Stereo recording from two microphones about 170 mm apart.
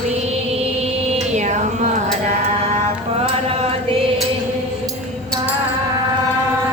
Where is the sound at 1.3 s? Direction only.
45° right (ahead or behind).